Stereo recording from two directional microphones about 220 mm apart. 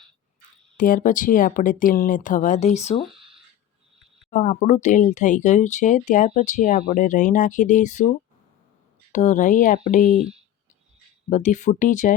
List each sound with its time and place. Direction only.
0.8 s speech: 35° left (ahead or behind)
4.3 s speech: 35° left (ahead or behind)
9.1 s speech: 35° left (ahead or behind)
11.3 s speech: 35° left (ahead or behind)